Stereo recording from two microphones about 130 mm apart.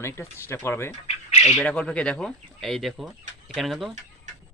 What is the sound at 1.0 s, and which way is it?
Squawk, 60° left (ahead or behind).